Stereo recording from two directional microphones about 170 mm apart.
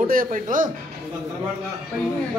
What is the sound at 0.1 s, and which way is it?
Speech, 55° right (ahead or behind).